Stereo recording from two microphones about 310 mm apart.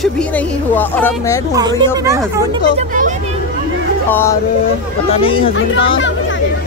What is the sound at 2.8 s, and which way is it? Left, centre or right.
Speech, right.